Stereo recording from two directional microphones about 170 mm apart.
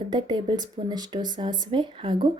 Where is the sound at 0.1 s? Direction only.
25° right (ahead or behind).